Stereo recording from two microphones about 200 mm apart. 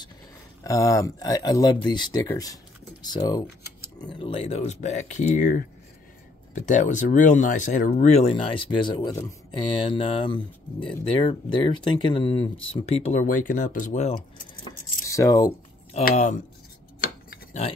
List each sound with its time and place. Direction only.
0.7 s speech: 15° left (ahead or behind)
12.9 s speech: 35° left (ahead or behind)
14.6 s a sound: 15° left (ahead or behind)
16.0 s speech: 40° left (ahead or behind)